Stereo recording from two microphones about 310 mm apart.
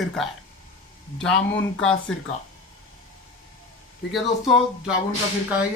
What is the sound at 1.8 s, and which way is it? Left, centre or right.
Speech, centre.